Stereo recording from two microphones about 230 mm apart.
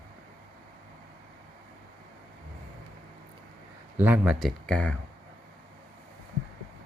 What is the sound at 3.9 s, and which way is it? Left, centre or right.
Speech, centre.